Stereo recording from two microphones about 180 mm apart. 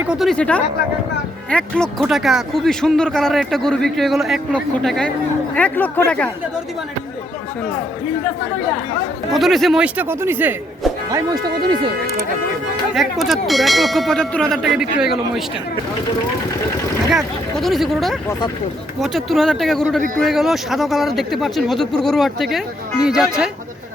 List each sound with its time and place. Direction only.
0.0 s a man's voice: 5° right (ahead or behind)
9.3 s speech: centre (ahead or behind)
11.1 s speech: 20° right (ahead or behind)
12.9 s speech: centre (ahead or behind)
17.1 s speech: centre (ahead or behind)